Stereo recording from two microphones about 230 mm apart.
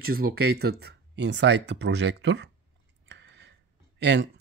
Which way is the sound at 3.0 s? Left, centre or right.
Right.